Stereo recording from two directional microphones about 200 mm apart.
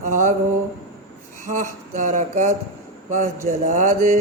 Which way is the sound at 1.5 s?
40° right (ahead or behind).